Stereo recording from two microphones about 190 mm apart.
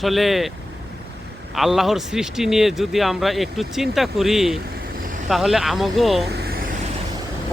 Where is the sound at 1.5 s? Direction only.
Centre (ahead or behind).